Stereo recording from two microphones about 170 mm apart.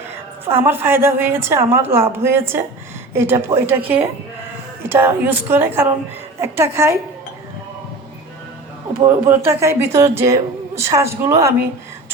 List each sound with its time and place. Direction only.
0.6 s speech: 15° right (ahead or behind)
4.9 s speech: 15° right (ahead or behind)
9.0 s speech: 10° right (ahead or behind)